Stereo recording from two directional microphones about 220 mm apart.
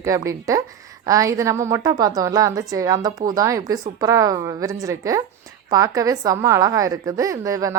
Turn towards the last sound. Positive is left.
turn(degrees=-15)  # may be behind; listen again after turning